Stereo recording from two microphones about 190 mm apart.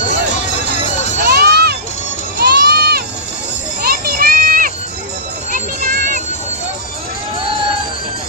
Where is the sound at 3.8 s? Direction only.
50° right (ahead or behind).